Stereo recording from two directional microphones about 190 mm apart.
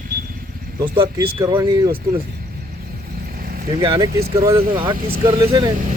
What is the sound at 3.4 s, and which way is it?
Vehicle, 50° right (ahead or behind).